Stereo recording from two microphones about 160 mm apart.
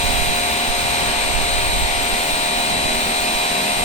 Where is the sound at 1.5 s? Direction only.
45° left (ahead or behind).